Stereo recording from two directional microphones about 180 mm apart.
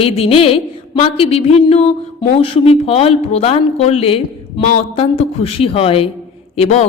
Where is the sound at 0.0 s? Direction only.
30° left (ahead or behind).